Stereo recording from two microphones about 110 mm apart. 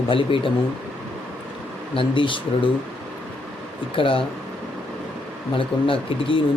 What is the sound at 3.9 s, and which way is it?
Speech, 55° left (ahead or behind).